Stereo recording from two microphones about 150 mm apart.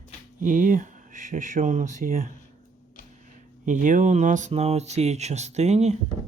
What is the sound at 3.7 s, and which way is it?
Speech, 60° right (ahead or behind).